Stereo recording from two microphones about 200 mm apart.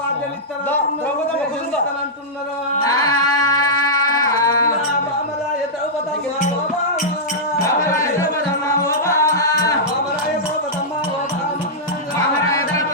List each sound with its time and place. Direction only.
2.8 s music: 20° left (ahead or behind)
7.6 s music: 15° left (ahead or behind)